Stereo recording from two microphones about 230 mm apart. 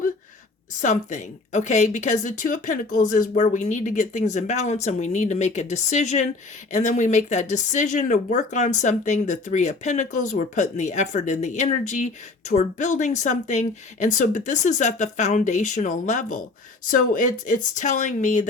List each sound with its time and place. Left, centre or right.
0.8 s speech: left